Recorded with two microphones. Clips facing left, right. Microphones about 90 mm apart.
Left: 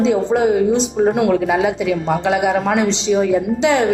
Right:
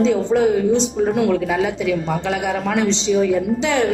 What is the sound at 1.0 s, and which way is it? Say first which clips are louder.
Speech: left 3 dB; 65° left (ahead or behind).